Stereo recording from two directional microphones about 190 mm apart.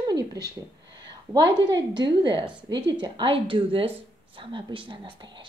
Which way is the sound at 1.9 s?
25° right (ahead or behind).